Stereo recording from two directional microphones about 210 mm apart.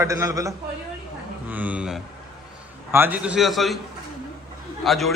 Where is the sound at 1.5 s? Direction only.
5° right (ahead or behind).